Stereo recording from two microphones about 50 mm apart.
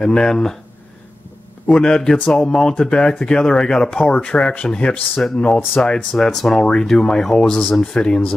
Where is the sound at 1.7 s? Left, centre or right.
Centre.